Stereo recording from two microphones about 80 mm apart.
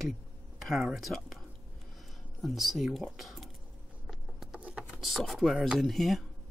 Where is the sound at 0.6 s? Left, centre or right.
Centre.